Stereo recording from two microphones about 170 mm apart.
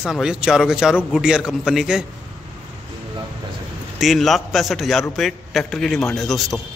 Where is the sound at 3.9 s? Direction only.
Centre (ahead or behind).